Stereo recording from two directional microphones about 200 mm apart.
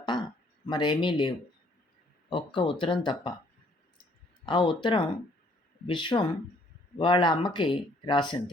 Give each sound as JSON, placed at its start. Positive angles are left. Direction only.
{"t": 0.0, "sound": "a sound", "side_deg": 20}
{"t": 0.7, "sound": "speech", "side_deg": 25}
{"t": 2.3, "sound": "speech", "side_deg": 25}
{"t": 4.4, "sound": "speech", "side_deg": 25}